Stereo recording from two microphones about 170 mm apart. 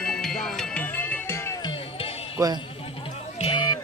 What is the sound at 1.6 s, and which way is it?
Music, 30° left (ahead or behind).